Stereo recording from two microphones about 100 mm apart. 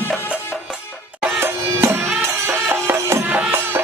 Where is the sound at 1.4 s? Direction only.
25° right (ahead or behind).